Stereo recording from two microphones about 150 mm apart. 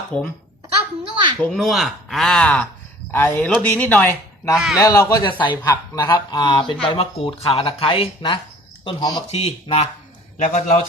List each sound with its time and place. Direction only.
0.1 s speech: 5° left (ahead or behind)
1.1 s a sound: 30° right (ahead or behind)
1.4 s speech: centre (ahead or behind)
4.5 s speech: 5° right (ahead or behind)
4.8 s a man's voice: 20° left (ahead or behind)
5.2 s speech: 30° left (ahead or behind)
9.3 s speech: 45° left (ahead or behind)
10.3 s a man's voice: 55° left (ahead or behind)